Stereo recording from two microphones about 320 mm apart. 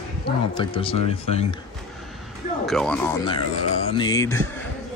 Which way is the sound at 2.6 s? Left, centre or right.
Centre.